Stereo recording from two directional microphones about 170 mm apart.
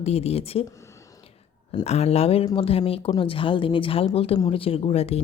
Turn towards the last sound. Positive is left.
turn(degrees=35)  # may be behind; listen again after turning